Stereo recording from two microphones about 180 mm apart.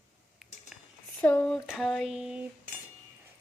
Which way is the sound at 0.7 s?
Centre (ahead or behind).